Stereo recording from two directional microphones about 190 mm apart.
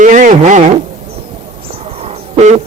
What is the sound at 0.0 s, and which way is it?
Speech, 40° right (ahead or behind).